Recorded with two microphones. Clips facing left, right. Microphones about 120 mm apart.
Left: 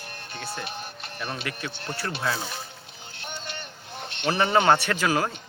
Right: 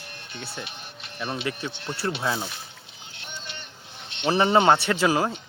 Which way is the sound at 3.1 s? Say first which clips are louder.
Left 3 dB; 45° left (ahead or behind).